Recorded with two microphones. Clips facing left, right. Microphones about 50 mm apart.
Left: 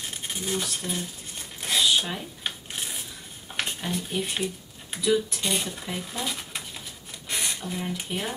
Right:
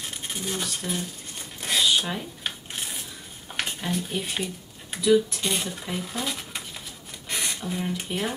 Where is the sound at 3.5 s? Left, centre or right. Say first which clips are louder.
Right 1 dB; centre.